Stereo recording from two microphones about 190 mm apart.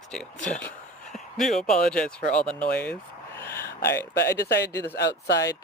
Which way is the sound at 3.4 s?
10° left (ahead or behind).